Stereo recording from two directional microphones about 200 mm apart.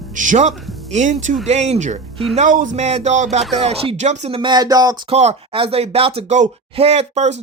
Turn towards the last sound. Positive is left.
turn(degrees=-35)  # may be behind; listen again after turning